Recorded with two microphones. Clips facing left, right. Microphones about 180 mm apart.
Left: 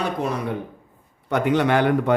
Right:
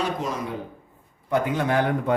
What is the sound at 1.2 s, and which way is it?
Speech, 70° left (ahead or behind).